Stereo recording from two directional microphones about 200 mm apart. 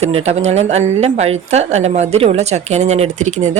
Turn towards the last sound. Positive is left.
turn(degrees=-35)  # may be behind; listen again after turning